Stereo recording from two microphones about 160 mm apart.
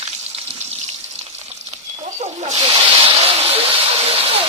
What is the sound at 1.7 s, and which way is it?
Snake, 45° right (ahead or behind).